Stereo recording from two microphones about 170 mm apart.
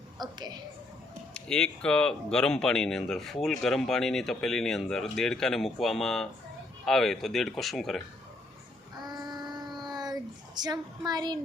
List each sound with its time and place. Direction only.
0.2 s a sound: 25° right (ahead or behind)
1.3 s speech: 5° left (ahead or behind)
9.0 s child singing: 25° right (ahead or behind)